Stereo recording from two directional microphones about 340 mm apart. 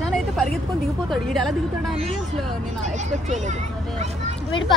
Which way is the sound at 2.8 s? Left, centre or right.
Right.